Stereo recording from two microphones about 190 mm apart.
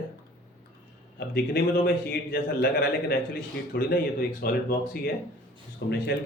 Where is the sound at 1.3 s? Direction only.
55° left (ahead or behind).